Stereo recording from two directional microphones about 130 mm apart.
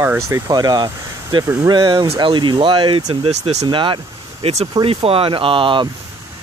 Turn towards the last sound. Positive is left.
turn(degrees=-40)  # may be behind; listen again after turning